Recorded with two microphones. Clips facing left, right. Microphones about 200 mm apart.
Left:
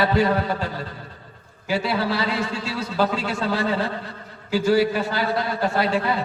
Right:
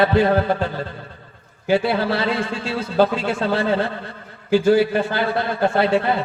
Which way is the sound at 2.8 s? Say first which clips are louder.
Right 5 dB; 30° right (ahead or behind).